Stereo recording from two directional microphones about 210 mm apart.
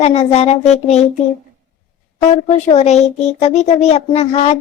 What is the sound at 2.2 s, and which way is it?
Speech, 30° left (ahead or behind).